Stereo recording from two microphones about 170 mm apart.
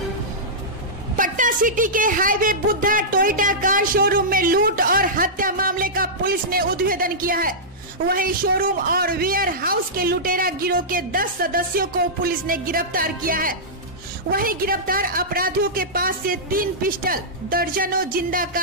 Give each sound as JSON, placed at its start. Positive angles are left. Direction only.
{"t": 1.1, "sound": "a woman's voice", "side_deg": -50}